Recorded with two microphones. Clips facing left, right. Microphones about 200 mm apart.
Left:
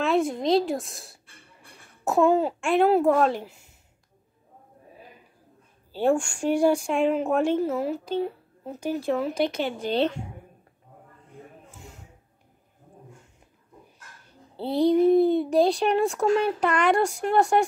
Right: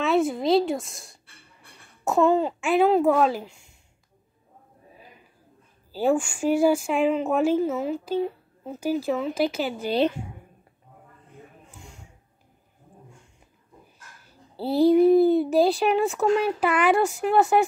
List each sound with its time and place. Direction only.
0.0 s speech: centre (ahead or behind)
5.9 s speech: 5° right (ahead or behind)
11.8 s a sound: centre (ahead or behind)
14.2 s a child's voice: 5° right (ahead or behind)